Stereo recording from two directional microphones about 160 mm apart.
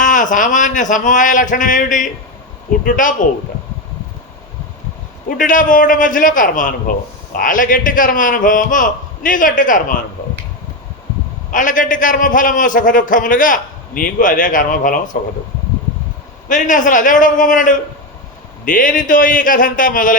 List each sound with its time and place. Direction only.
0.0 s a man's voice: 55° left (ahead or behind)
5.4 s a man's voice: 55° left (ahead or behind)
11.5 s a man's voice: 55° left (ahead or behind)
16.5 s a man's voice: 55° left (ahead or behind)